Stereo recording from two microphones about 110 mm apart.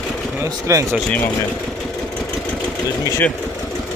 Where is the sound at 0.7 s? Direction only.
30° right (ahead or behind).